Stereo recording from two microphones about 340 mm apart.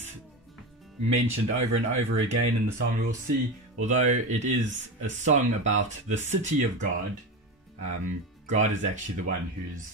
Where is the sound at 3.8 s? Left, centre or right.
Right.